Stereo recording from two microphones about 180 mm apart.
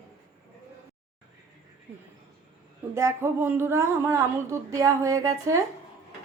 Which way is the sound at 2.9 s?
15° right (ahead or behind).